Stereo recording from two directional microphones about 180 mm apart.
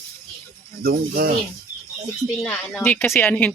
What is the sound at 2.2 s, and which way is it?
A woman's voice, 5° left (ahead or behind).